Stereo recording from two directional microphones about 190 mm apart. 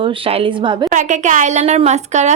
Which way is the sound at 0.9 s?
40° right (ahead or behind).